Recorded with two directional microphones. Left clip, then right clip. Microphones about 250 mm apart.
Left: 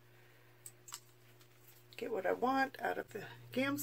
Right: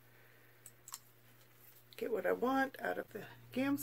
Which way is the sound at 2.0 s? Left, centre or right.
Right.